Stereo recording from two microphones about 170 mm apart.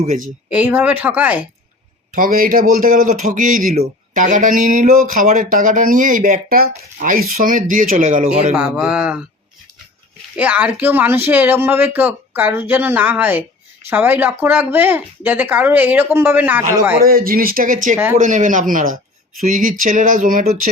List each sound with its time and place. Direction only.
0.5 s speech: 10° right (ahead or behind)
2.1 s a man's voice: 55° right (ahead or behind)
8.5 s speech: 10° right (ahead or behind)
10.3 s speech: 10° right (ahead or behind)
17.0 s a man's voice: 60° right (ahead or behind)